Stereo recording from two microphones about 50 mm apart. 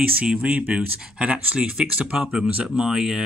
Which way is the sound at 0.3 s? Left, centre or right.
Right.